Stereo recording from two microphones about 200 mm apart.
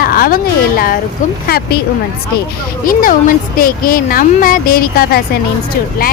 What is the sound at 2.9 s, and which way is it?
Speech, 40° left (ahead or behind).